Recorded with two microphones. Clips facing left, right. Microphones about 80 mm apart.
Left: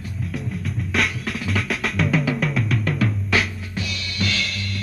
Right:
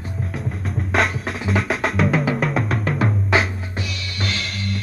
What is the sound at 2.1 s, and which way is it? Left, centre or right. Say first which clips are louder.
Music: right 1 dB; right.